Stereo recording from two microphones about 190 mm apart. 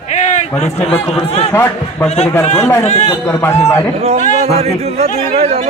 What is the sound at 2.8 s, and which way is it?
Speech, 35° left (ahead or behind).